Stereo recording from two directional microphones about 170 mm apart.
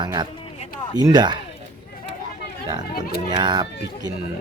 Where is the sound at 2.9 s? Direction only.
65° left (ahead or behind).